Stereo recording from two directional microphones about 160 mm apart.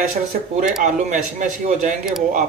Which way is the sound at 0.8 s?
50° right (ahead or behind).